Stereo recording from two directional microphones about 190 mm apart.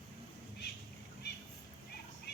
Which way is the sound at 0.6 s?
60° left (ahead or behind).